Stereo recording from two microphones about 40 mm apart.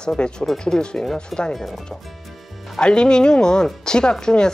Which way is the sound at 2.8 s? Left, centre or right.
Left.